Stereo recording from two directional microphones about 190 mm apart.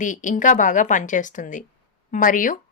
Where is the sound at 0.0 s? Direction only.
40° left (ahead or behind).